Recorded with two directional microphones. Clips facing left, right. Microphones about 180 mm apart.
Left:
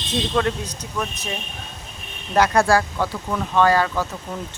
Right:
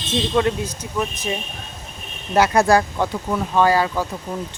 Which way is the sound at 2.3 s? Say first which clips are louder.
Right 2 dB; 10° right (ahead or behind).